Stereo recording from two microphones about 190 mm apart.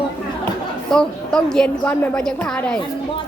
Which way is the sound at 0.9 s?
5° left (ahead or behind).